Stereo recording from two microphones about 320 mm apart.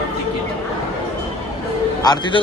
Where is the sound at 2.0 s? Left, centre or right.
Centre.